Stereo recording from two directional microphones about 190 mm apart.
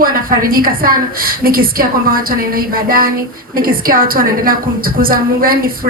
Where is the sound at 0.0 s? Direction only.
50° right (ahead or behind).